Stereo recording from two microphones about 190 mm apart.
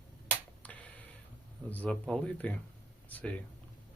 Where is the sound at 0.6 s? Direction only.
10° left (ahead or behind).